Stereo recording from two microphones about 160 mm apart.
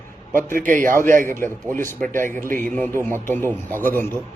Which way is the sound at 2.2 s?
15° left (ahead or behind).